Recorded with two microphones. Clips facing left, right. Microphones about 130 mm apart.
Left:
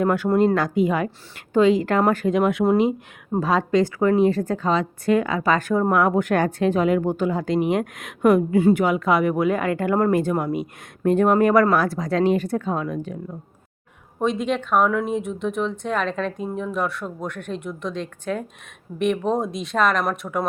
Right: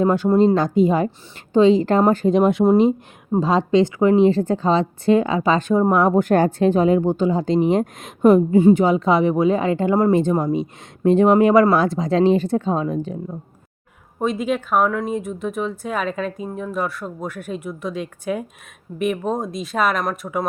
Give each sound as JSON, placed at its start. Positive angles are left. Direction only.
{"t": 0.0, "sound": "a woman's voice", "side_deg": -25}
{"t": 14.2, "sound": "speech", "side_deg": 0}